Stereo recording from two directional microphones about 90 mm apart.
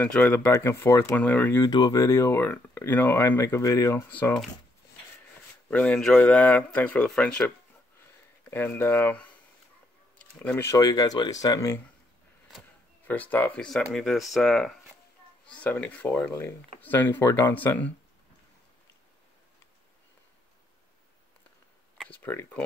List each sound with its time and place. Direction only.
0.2 s speech: 20° left (ahead or behind)
0.5 s speech: 30° left (ahead or behind)
1.1 s speech: 20° left (ahead or behind)
1.6 s speech: 50° left (ahead or behind)
2.0 s speech: 30° left (ahead or behind)
5.7 s speech: 15° left (ahead or behind)
8.5 s speech: 25° left (ahead or behind)
10.5 s speech: 30° left (ahead or behind)
10.8 s speech: 45° left (ahead or behind)
13.0 s speech: 20° left (ahead or behind)
13.6 s speech: 5° left (ahead or behind)
21.9 s a sound: 10° left (ahead or behind)
22.2 s speech: 25° left (ahead or behind)